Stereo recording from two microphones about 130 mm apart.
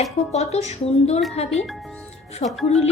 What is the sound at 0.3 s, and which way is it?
Speech, 55° left (ahead or behind).